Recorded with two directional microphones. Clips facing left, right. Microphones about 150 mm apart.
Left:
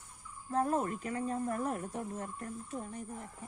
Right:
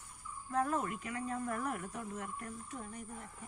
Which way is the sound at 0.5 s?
35° left (ahead or behind).